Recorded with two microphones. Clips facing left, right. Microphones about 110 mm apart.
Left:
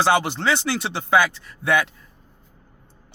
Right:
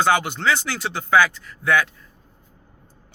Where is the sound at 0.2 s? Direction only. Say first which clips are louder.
Even; 25° left (ahead or behind).